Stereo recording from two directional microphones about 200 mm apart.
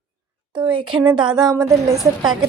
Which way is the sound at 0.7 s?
25° right (ahead or behind).